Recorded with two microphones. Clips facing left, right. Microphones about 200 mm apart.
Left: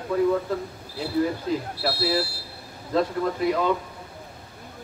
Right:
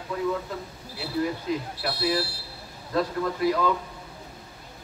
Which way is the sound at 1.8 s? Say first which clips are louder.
Left 2 dB; 30° left (ahead or behind).